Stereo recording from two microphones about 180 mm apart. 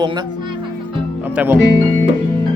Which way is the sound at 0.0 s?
25° right (ahead or behind).